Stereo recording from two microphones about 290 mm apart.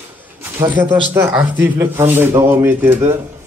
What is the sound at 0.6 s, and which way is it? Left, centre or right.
Speech, centre.